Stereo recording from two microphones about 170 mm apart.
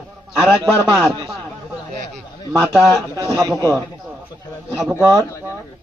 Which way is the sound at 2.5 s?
5° left (ahead or behind).